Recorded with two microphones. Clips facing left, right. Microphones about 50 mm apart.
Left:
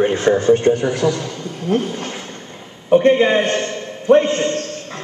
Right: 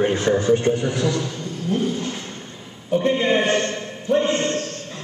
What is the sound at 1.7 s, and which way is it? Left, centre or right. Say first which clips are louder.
Speech: left 3 dB; left.